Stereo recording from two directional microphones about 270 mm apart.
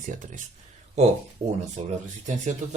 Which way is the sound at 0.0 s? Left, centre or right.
Right.